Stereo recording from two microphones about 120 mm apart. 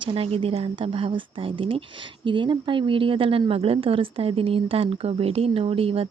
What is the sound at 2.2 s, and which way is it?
A woman's voice, 45° right (ahead or behind).